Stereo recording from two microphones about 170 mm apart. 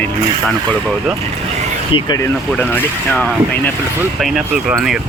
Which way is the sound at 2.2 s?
10° left (ahead or behind).